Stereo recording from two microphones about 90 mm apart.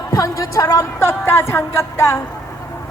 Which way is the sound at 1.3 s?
25° left (ahead or behind).